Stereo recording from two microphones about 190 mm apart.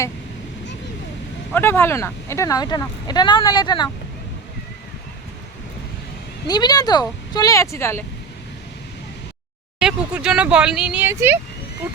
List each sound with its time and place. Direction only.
1.5 s speech: 10° left (ahead or behind)
6.5 s speech: 20° left (ahead or behind)
9.8 s speech: 5° right (ahead or behind)